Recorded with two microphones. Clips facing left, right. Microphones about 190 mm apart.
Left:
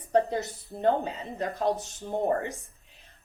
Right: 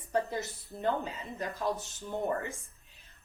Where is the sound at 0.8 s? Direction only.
35° left (ahead or behind).